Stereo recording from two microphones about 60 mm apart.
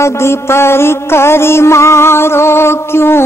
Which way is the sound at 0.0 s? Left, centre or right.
Left.